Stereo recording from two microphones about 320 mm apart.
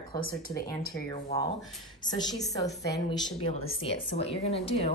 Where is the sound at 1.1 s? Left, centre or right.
Centre.